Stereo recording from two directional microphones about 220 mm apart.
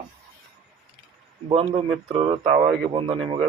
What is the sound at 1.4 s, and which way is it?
Speech, 25° right (ahead or behind).